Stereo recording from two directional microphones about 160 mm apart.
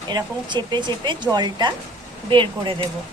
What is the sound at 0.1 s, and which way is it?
Speech, 25° right (ahead or behind).